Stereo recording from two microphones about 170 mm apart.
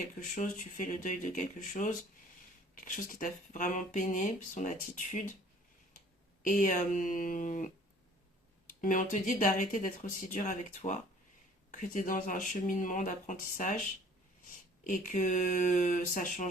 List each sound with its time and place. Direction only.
0.2 s speech: 45° left (ahead or behind)
6.4 s speech: 50° left (ahead or behind)
14.8 s speech: 50° left (ahead or behind)